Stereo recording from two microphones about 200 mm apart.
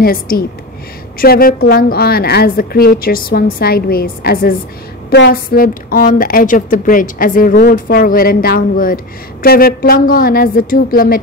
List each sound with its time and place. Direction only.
0.0 s a woman's voice: 50° left (ahead or behind)